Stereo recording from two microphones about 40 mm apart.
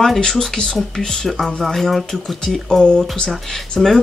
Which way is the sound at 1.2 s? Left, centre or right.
Centre.